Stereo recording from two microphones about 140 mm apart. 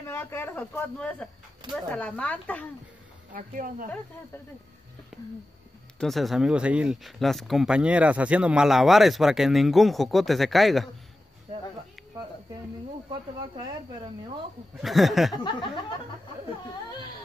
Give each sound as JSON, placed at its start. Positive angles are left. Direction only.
{"t": 0.0, "sound": "speech", "side_deg": 15}
{"t": 3.3, "sound": "speech", "side_deg": -75}
{"t": 5.9, "sound": "speech", "side_deg": 0}
{"t": 14.8, "sound": "speech", "side_deg": 0}
{"t": 15.4, "sound": "speech", "side_deg": 35}